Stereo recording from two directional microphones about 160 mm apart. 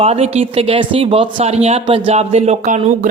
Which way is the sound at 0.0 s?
40° right (ahead or behind).